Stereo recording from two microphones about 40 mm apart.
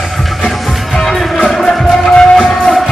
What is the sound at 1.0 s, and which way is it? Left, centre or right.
Music, centre.